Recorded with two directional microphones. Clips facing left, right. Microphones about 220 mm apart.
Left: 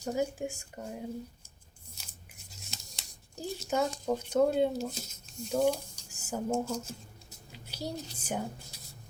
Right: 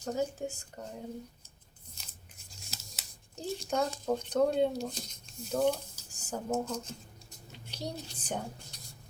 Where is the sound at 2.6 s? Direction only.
Centre (ahead or behind).